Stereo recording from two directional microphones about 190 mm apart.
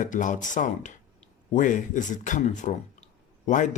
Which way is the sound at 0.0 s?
40° left (ahead or behind).